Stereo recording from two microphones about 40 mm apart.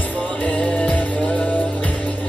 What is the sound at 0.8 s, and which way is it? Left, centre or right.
Music, left.